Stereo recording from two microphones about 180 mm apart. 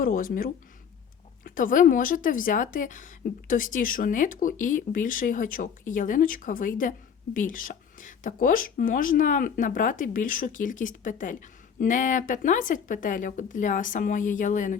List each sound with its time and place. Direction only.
0.0 s speech: 50° left (ahead or behind)